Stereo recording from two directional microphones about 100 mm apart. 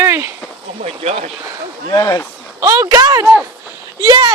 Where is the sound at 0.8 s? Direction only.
90° right.